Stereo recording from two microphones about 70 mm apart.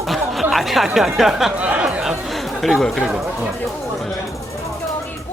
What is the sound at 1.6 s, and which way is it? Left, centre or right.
Speech, centre.